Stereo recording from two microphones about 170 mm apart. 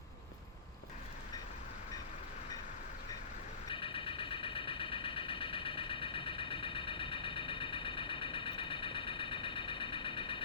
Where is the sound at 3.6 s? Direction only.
30° left (ahead or behind).